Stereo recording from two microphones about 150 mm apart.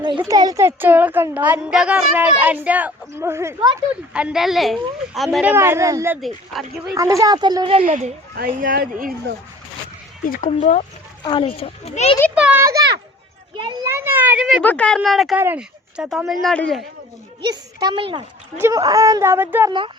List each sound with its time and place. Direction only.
0.0 s a woman's voice: 30° right (ahead or behind)
4.1 s a woman's voice: 5° right (ahead or behind)
6.2 s speech: centre (ahead or behind)
6.9 s speech: 20° right (ahead or behind); by 7.9 s 35° right (ahead or behind)
7.9 s a woman's voice: 55° right (ahead or behind)
8.4 s speech: 75° right (ahead or behind)
10.2 s speech: 60° left (ahead or behind)
11.2 s a child's voice: 30° left (ahead or behind)
12.3 s a sound: 10° right (ahead or behind)
13.8 s a woman's voice: 15° right (ahead or behind)
14.6 s speech: 10° left (ahead or behind)
15.4 s speech: 10° right (ahead or behind)
17.4 s a child's voice: 30° right (ahead or behind)
18.5 s a woman's voice: 15° right (ahead or behind)